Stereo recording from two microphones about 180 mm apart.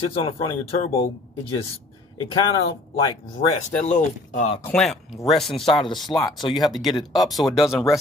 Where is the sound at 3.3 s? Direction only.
40° left (ahead or behind).